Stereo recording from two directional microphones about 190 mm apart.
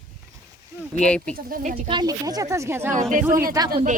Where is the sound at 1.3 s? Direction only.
45° right (ahead or behind).